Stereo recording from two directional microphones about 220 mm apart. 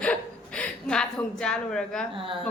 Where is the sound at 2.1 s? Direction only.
25° right (ahead or behind).